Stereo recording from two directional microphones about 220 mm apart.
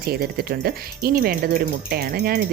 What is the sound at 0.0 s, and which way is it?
Speech, 45° right (ahead or behind).